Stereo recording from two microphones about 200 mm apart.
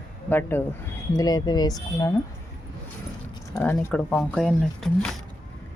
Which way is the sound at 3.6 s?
5° left (ahead or behind).